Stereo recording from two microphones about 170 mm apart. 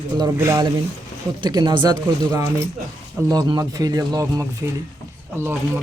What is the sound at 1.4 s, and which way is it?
Speech, 30° right (ahead or behind).